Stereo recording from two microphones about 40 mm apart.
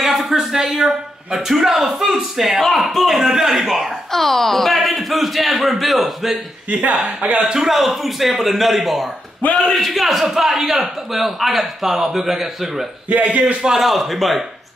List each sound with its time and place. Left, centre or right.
0.0 s a man's voice: centre
2.6 s a man's voice: centre
4.1 s speech: centre
6.7 s speech: right
7.5 s a man's voice: centre
13.1 s speech: right
13.6 s a man's voice: centre
13.8 s speech: centre